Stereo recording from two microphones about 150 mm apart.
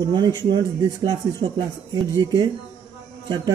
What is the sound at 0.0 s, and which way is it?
Speech, 25° right (ahead or behind).